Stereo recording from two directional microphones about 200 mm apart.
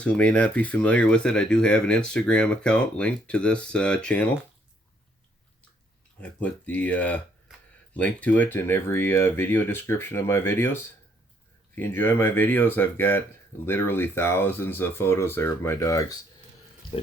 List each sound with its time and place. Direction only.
0.0 s speech: 5° left (ahead or behind)
6.1 s speech: 5° left (ahead or behind)
16.9 s speech: 25° left (ahead or behind)